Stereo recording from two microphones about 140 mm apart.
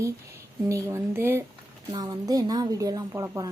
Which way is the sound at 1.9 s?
30° right (ahead or behind).